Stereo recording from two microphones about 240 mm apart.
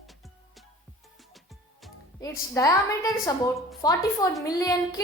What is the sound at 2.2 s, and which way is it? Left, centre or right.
A woman's voice, centre.